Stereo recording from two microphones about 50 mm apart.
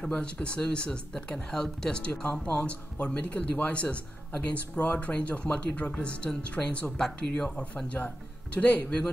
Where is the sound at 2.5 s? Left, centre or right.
Left.